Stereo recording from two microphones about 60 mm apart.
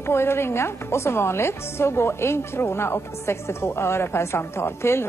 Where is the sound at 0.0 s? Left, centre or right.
Left.